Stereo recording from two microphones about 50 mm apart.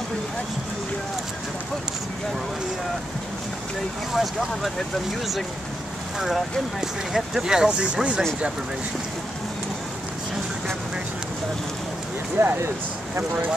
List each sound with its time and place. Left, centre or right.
4.1 s speech: centre
6.1 s speech: centre
12.4 s speech: right